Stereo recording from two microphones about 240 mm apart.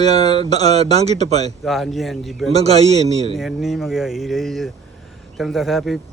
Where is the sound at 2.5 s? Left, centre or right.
Right.